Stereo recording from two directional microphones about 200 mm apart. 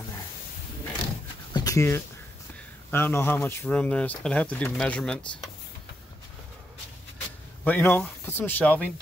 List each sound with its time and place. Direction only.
1.5 s a sound: 20° left (ahead or behind)
2.9 s speech: 10° left (ahead or behind)
7.6 s speech: 10° left (ahead or behind)